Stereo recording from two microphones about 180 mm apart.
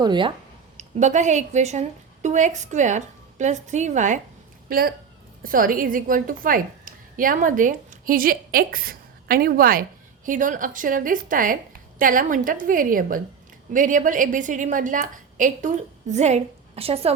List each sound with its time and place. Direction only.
0.0 s speech: 25° right (ahead or behind)
0.8 s a woman's voice: 40° right (ahead or behind)
4.7 s a woman's voice: 55° right (ahead or behind); by 17.2 s 35° right (ahead or behind)